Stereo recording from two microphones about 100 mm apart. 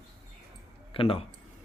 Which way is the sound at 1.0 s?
65° left (ahead or behind).